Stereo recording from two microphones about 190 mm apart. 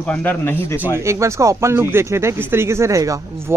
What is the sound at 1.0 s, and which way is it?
Speech, 15° right (ahead or behind).